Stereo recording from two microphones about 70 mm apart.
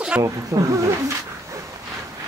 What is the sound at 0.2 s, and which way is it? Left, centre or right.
Speech, right.